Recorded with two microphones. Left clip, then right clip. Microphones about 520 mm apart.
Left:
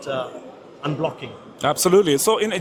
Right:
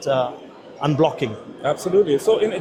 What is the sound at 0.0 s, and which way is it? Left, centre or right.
A man's voice, right.